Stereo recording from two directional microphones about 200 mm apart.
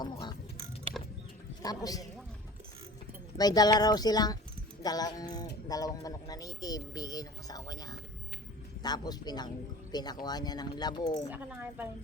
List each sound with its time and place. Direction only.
0.0 s a sound: 20° left (ahead or behind)
1.6 s speech: 20° left (ahead or behind)
3.3 s speech: 20° left (ahead or behind)
11.3 s speech: 10° right (ahead or behind)